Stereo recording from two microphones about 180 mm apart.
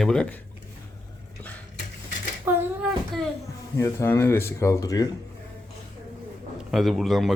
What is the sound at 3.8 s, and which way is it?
Speech, 15° left (ahead or behind).